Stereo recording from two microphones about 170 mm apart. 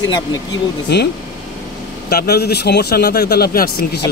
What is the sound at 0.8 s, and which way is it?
A man's voice, 75° left (ahead or behind).